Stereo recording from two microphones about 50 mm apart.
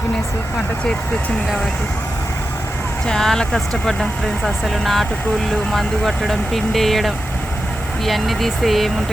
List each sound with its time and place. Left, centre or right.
3.1 s speech: centre
4.4 s speech: centre